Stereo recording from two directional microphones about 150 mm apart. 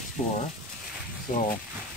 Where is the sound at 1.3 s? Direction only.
60° left (ahead or behind).